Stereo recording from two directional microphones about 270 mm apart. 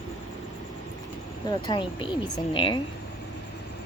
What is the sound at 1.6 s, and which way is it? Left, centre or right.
A woman's voice, centre.